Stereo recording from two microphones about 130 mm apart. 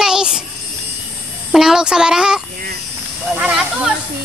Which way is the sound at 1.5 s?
5° right (ahead or behind).